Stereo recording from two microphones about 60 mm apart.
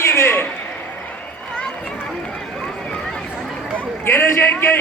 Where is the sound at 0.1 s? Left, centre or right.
Left.